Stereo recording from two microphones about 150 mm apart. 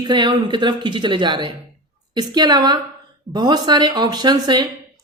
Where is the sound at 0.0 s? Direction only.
30° right (ahead or behind).